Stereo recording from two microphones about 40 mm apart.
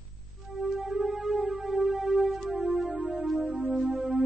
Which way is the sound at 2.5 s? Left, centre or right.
Right.